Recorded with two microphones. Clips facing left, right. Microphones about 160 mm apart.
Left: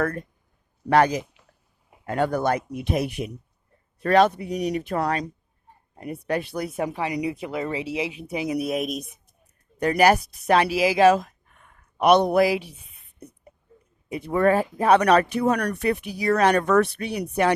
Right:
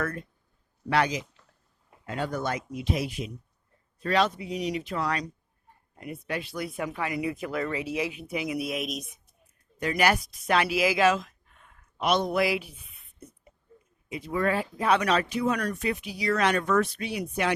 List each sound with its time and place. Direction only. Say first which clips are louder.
0.0 s speech: left 6 dB; 55° left (ahead or behind)
1.2 s a sound: left 4 dB; 15° left (ahead or behind)
2.0 s speech: left 7 dB; 55° left (ahead or behind)
6.3 s speech: left 7 dB; 45° left (ahead or behind)
6.7 s speech: left 4 dB; 30° left (ahead or behind)
9.7 s speech: left 6 dB; 60° left (ahead or behind)
10.4 s speech: left 4 dB; 35° left (ahead or behind)
11.3 s a sound: left 3 dB; 60° left (ahead or behind)
12.4 s speech: left 6 dB; 35° left (ahead or behind)
14.3 s speech: left 7 dB; 50° left (ahead or behind)
14.8 s speech: left 6 dB; 55° left (ahead or behind)
16.3 s speech: left 6 dB; 40° left (ahead or behind)
16.6 s speech: left 5 dB; 65° left (ahead or behind)